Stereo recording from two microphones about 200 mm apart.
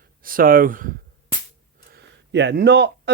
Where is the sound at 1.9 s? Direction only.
55° right (ahead or behind).